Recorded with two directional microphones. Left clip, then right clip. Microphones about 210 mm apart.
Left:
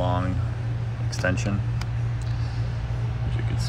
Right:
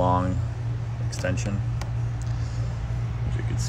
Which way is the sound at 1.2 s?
5° right (ahead or behind).